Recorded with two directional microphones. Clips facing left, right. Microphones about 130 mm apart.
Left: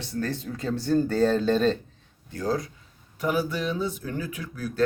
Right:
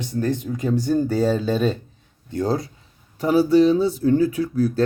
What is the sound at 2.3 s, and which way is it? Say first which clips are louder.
Speech: right 5 dB; 30° right (ahead or behind).